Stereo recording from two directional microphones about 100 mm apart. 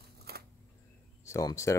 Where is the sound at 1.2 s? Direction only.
30° left (ahead or behind).